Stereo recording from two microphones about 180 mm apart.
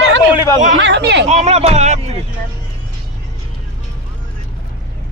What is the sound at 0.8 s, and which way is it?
Speech, 75° right (ahead or behind).